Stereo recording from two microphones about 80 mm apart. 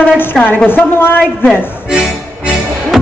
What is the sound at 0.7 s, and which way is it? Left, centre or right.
Speech, left.